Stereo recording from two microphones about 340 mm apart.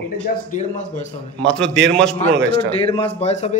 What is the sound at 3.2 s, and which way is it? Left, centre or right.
Speech, centre.